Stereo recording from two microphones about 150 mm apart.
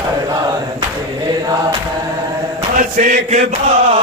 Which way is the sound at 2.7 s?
60° right (ahead or behind).